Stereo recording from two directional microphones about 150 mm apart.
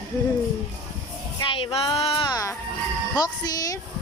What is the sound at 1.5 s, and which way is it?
Music, 35° left (ahead or behind).